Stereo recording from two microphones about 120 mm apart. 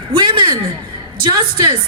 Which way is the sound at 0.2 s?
40° right (ahead or behind).